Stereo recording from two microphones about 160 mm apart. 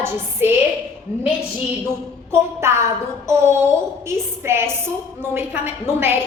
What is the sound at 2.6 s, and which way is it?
Speech, 15° right (ahead or behind).